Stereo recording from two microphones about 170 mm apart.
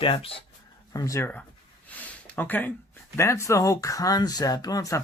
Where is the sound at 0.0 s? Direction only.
30° left (ahead or behind).